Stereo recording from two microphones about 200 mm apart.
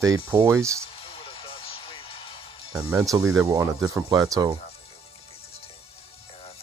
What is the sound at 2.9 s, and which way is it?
Speech, 15° right (ahead or behind).